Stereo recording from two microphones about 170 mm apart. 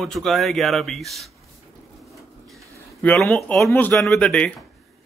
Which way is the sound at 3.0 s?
5° left (ahead or behind).